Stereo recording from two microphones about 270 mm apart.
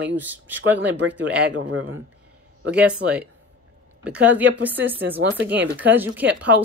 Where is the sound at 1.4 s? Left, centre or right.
Right.